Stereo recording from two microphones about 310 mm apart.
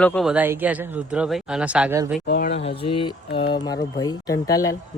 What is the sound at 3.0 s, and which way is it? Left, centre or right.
Speech, centre.